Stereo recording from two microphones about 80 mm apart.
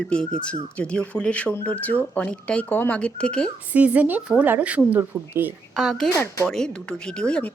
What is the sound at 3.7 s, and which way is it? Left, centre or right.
Speech, centre.